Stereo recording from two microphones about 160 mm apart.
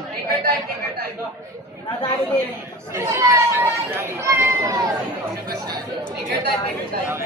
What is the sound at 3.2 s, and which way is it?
Speech, 15° right (ahead or behind).